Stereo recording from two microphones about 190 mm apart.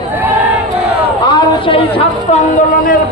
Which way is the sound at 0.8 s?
30° right (ahead or behind).